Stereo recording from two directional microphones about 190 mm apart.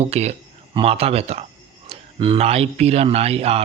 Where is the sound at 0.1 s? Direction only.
35° right (ahead or behind).